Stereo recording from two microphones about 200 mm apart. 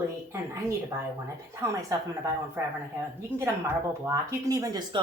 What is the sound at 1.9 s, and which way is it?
Speech, 15° right (ahead or behind).